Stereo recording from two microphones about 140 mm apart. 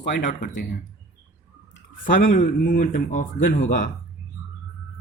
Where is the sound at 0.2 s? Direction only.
60° left (ahead or behind).